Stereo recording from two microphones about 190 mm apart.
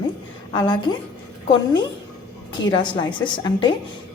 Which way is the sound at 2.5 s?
25° left (ahead or behind).